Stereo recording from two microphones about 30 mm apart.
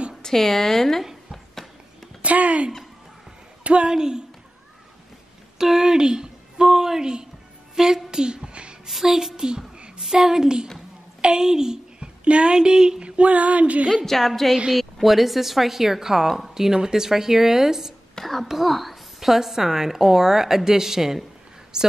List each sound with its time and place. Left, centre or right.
0.2 s a woman's voice: centre
2.2 s a sound: right
3.8 s speech: right
5.6 s a sound: centre
8.8 s music: centre
9.9 s a woman's voice: centre
11.1 s a sound: right
12.3 s speech: right
13.0 s female singing: right
13.3 s a sound: right
14.0 s a woman's voice: centre
16.5 s speech: centre
18.2 s a woman's voice: centre; by 21.9 s right